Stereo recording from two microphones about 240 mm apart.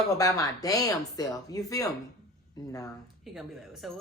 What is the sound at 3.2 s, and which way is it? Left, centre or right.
Speech, centre.